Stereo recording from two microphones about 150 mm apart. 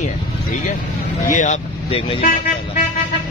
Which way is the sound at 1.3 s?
55° left (ahead or behind).